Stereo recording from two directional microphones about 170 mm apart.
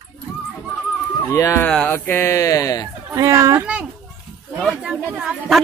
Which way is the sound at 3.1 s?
20° right (ahead or behind).